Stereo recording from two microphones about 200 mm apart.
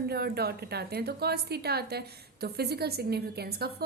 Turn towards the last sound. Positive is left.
turn(degrees=-50)  # may be behind; listen again after turning